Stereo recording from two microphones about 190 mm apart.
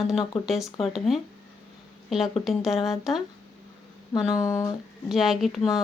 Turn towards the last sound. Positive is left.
turn(degrees=0)  # may be behind; listen again after turning